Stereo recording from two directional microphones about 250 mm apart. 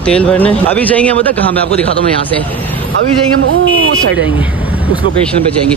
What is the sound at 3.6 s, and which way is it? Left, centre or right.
Speech, right.